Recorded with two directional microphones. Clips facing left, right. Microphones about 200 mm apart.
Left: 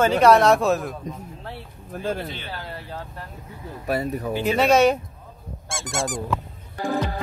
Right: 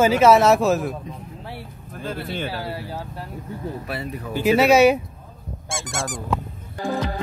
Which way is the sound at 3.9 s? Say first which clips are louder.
Left 5 dB; 40° left (ahead or behind).